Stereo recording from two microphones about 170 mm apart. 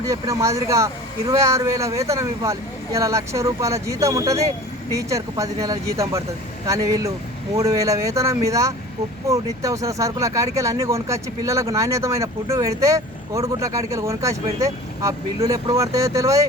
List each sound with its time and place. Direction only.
0.0 s speech: 20° right (ahead or behind)